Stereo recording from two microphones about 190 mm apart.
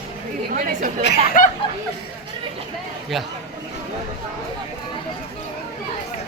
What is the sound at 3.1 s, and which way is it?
Speech, centre (ahead or behind).